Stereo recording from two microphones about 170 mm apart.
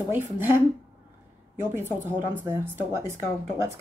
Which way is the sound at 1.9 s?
15° right (ahead or behind).